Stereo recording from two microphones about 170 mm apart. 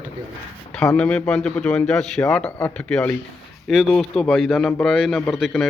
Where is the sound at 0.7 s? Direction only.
5° left (ahead or behind).